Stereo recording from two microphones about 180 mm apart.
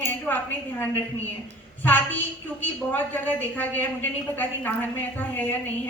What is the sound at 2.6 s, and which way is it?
A woman's voice, 10° left (ahead or behind).